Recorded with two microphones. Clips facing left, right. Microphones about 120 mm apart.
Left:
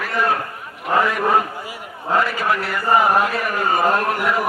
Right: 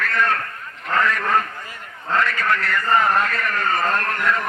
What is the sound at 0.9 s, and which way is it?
Chant, 10° left (ahead or behind).